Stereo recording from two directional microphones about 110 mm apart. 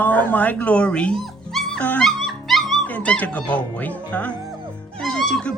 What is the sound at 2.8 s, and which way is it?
Speech, 15° left (ahead or behind).